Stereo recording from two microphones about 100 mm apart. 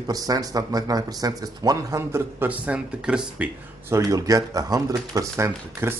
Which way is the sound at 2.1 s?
15° right (ahead or behind).